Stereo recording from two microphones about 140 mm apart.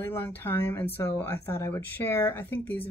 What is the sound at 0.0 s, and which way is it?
Speech, 15° left (ahead or behind).